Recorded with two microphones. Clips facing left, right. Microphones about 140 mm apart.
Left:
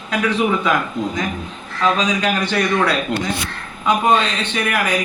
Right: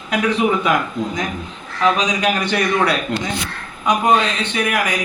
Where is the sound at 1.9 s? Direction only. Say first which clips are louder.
Even; 15° right (ahead or behind).